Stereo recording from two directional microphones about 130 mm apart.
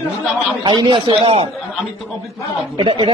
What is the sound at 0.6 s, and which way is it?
Speech, 40° right (ahead or behind).